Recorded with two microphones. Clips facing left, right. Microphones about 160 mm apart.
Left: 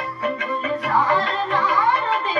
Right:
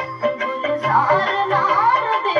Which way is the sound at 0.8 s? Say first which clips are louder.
Right 2 dB; 40° right (ahead or behind).